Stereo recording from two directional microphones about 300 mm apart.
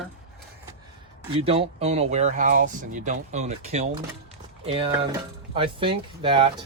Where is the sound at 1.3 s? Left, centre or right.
Centre.